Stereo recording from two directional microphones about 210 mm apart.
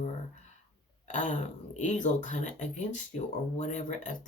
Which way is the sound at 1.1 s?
35° left (ahead or behind).